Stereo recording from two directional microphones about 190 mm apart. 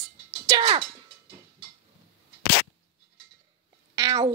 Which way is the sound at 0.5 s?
25° right (ahead or behind).